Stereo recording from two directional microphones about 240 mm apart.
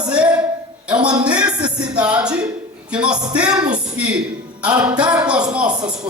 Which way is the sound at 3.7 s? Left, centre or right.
Centre.